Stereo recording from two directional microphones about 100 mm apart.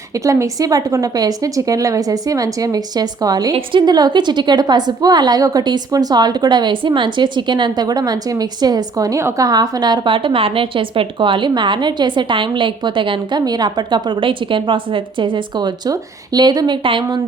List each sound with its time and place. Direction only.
0.1 s a woman's voice: 35° right (ahead or behind); by 17.2 s 55° right (ahead or behind)